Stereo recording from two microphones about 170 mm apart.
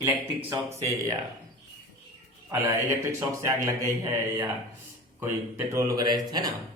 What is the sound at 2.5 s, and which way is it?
Speech, 15° right (ahead or behind).